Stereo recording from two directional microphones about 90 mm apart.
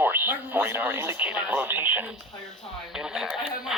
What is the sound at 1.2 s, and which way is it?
Speech, 15° right (ahead or behind).